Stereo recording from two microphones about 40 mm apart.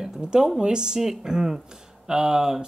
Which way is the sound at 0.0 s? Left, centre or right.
Centre.